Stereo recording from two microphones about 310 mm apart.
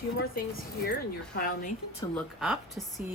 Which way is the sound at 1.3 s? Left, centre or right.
Left.